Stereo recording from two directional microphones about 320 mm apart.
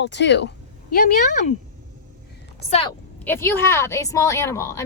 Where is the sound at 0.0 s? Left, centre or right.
Left.